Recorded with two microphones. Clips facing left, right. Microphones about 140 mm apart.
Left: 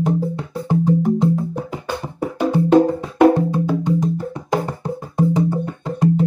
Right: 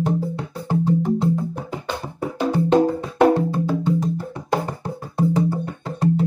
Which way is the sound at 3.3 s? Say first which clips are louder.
Left 2 dB; 15° left (ahead or behind).